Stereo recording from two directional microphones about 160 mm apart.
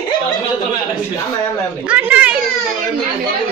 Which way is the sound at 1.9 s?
10° right (ahead or behind).